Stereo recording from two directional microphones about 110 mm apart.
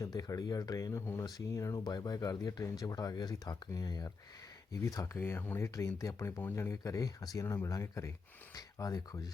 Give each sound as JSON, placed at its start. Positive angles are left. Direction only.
{"t": 0.0, "sound": "speech", "side_deg": 30}